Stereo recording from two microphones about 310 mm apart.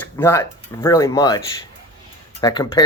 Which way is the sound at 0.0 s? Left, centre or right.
Centre.